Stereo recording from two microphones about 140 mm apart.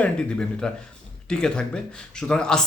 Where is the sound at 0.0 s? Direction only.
5° left (ahead or behind).